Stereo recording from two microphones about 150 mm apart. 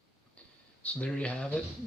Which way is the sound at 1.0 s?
5° left (ahead or behind).